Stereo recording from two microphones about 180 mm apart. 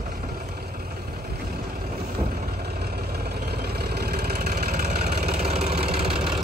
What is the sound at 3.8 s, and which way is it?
Vehicle, 60° right (ahead or behind).